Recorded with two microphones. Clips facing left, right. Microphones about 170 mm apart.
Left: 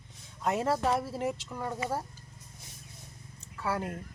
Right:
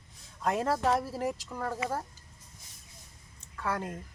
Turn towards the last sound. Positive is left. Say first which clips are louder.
# left 1 dB
turn(degrees=5)  # may be behind; listen again after turning